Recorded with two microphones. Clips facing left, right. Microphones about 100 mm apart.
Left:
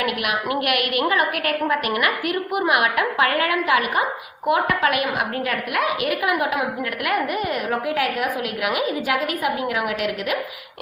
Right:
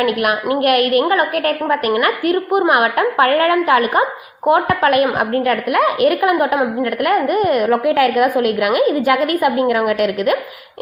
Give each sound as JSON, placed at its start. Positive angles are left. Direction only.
{"t": 0.0, "sound": "a woman's voice", "side_deg": -45}